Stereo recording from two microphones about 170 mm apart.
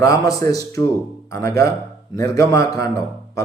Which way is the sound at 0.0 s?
20° left (ahead or behind).